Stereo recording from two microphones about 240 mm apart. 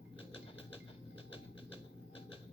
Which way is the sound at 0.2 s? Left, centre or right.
Left.